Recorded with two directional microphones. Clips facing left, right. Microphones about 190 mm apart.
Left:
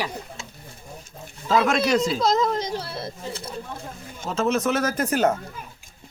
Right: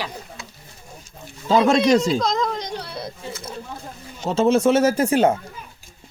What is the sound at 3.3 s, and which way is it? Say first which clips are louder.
Speech: even; 35° left (ahead or behind).